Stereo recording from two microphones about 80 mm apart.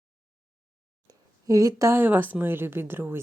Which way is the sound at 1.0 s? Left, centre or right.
Right.